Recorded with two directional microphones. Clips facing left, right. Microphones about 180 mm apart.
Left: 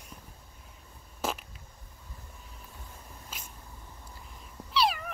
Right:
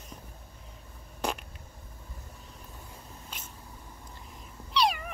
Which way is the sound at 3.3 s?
5° left (ahead or behind).